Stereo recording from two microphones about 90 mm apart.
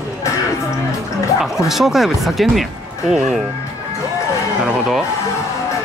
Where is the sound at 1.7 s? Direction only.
5° right (ahead or behind).